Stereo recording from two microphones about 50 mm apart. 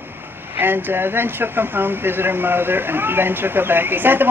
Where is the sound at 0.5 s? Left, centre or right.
Right.